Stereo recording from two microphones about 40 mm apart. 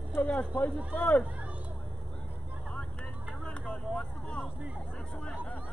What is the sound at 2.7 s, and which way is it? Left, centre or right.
Vehicle, left.